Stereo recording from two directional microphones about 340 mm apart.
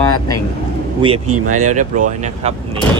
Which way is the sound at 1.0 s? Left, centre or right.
Centre.